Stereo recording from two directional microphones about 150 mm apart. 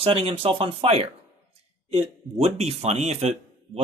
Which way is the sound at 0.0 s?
40° right (ahead or behind).